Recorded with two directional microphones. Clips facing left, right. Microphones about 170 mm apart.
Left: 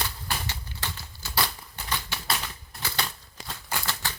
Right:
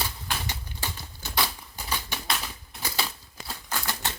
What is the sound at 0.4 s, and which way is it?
Typewriter, 15° right (ahead or behind).